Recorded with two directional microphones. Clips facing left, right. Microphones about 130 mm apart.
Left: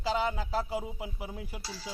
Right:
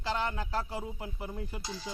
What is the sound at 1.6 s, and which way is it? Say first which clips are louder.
Speech: right 2 dB; 20° right (ahead or behind).